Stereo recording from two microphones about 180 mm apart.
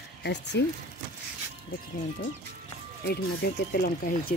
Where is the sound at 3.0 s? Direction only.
65° left (ahead or behind).